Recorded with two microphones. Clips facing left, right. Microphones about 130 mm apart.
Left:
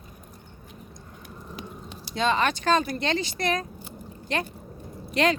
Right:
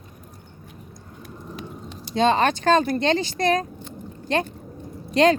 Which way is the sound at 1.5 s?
Centre (ahead or behind).